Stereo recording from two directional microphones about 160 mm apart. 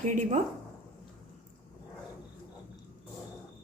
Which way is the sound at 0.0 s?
50° right (ahead or behind).